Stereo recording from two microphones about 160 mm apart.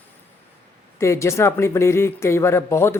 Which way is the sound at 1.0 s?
20° left (ahead or behind).